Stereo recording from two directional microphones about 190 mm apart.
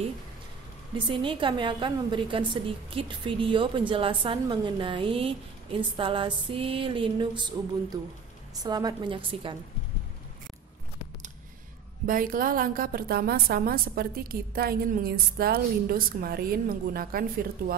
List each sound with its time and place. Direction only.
0.9 s a woman's voice: 25° right (ahead or behind)
12.1 s a woman's voice: 50° right (ahead or behind)